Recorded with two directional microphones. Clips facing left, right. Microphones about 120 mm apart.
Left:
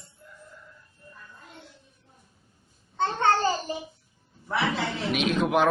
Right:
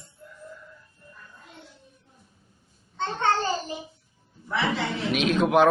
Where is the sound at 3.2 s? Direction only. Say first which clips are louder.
Left 1 dB; 40° left (ahead or behind).